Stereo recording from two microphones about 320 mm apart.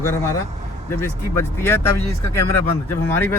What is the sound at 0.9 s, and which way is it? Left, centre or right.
Speech, centre.